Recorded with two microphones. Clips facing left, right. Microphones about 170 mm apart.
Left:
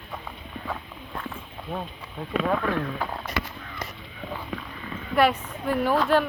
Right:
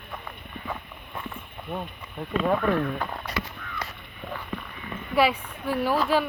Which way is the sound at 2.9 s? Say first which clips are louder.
Left 1 dB; 5° left (ahead or behind).